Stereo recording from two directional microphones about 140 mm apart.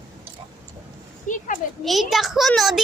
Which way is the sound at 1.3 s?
65° left (ahead or behind).